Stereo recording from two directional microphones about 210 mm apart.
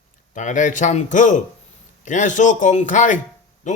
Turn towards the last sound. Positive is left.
turn(degrees=35)  # may be behind; listen again after turning